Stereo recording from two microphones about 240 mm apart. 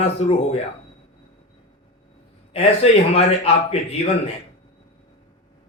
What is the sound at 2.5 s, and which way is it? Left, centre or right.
A man's voice, left.